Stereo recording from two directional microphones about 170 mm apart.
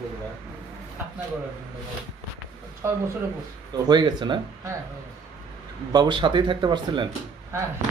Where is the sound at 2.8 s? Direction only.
15° right (ahead or behind).